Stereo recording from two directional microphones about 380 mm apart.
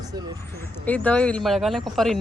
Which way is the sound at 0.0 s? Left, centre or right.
Centre.